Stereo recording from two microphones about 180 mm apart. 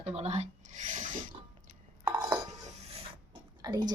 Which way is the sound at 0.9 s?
45° right (ahead or behind).